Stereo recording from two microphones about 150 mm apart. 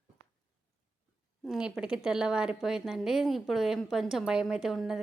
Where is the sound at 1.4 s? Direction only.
5° right (ahead or behind).